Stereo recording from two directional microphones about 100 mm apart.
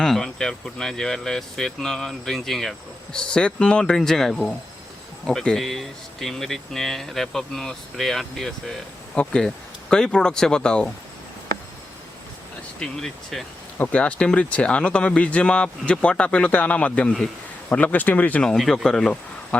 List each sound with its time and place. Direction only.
0.0 s speech: 5° left (ahead or behind)
12.8 s speech: 5° left (ahead or behind)
18.5 s speech: 5° left (ahead or behind)